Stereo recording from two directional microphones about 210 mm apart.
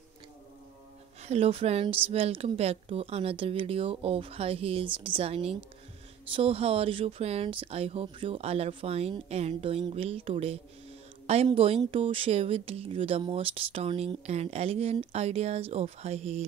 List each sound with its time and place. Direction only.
1.2 s speech: 30° right (ahead or behind)